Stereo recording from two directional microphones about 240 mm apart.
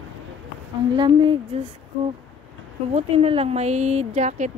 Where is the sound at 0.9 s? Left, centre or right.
Right.